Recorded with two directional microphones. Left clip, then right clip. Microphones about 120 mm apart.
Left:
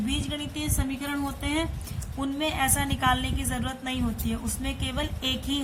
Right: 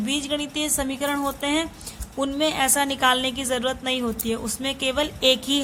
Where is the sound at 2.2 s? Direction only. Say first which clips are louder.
Right 5 dB; 60° right (ahead or behind).